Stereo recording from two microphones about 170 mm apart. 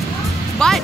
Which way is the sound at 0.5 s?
5° left (ahead or behind).